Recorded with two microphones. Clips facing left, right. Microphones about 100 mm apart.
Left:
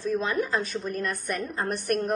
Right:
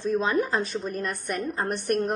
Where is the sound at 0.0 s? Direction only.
25° right (ahead or behind).